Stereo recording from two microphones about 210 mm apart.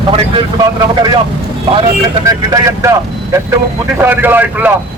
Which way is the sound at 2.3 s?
15° right (ahead or behind).